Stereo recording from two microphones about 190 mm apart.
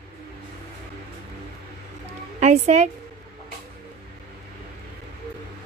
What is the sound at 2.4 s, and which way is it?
Speech, 40° right (ahead or behind).